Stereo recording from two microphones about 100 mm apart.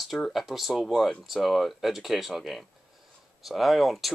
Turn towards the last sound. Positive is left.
turn(degrees=0)  # may be behind; listen again after turning